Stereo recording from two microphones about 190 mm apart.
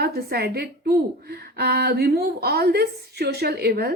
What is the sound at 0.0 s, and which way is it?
A woman's voice, 55° right (ahead or behind).